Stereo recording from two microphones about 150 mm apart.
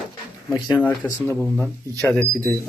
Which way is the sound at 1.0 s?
15° left (ahead or behind).